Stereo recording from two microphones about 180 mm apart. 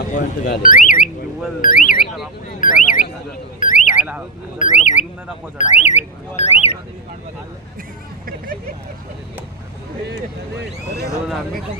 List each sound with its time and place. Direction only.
0.1 s speech: 55° left (ahead or behind)
1.6 s alarm: 50° left (ahead or behind)
2.6 s a sound: 50° left (ahead or behind)
3.6 s alarm: 45° left (ahead or behind)
5.5 s speech: 40° left (ahead or behind)
10.6 s speech: 65° right (ahead or behind)